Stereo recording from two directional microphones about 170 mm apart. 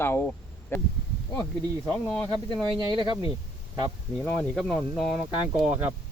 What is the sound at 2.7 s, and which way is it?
Speech, 30° right (ahead or behind).